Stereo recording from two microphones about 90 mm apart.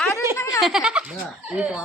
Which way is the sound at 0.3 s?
35° left (ahead or behind).